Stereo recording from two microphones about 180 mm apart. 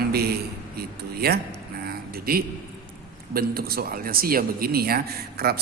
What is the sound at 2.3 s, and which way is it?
Speech, 55° right (ahead or behind).